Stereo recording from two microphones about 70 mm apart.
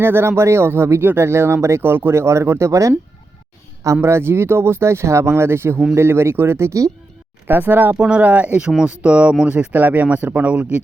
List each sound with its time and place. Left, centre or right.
0.0 s speech: right
4.0 s speech: right
7.4 s speech: right
7.9 s speech: centre